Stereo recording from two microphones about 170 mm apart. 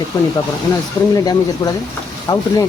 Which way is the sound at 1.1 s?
20° left (ahead or behind).